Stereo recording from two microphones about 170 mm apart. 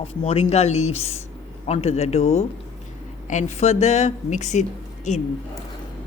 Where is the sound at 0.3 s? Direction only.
40° left (ahead or behind).